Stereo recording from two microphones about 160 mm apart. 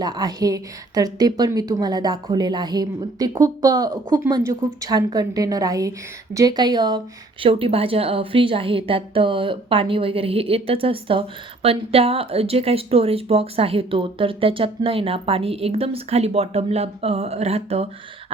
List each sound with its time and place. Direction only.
0.0 s a woman's voice: 25° right (ahead or behind)
7.4 s a woman's voice: 35° right (ahead or behind)